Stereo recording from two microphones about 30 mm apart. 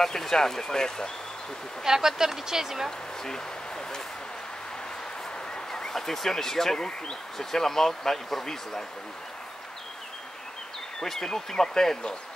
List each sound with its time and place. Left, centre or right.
0.1 s speech: centre
1.9 s speech: centre
5.7 s speech: centre
11.1 s speech: centre